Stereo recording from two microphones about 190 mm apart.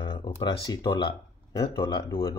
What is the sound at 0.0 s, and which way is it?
Speech, 25° left (ahead or behind).